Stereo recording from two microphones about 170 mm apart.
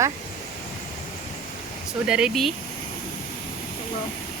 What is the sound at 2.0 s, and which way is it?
Speech, 5° right (ahead or behind).